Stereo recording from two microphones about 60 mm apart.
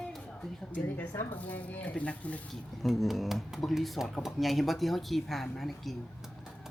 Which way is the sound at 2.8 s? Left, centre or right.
Centre.